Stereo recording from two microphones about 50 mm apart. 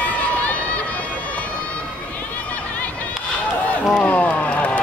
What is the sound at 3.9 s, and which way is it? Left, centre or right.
Run, left.